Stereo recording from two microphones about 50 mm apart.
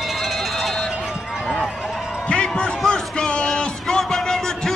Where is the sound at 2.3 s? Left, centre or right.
Centre.